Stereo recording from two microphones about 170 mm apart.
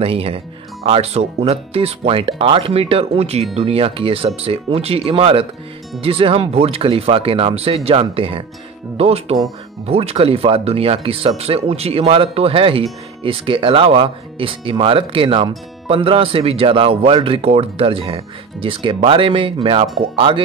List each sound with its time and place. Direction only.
0.0 s speech: 35° right (ahead or behind)